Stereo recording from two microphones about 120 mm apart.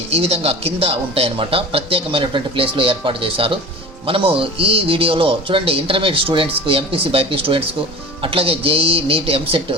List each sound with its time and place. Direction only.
0.1 s speech: 55° right (ahead or behind)